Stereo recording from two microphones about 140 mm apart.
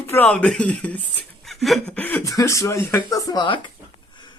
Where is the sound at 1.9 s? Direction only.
15° left (ahead or behind).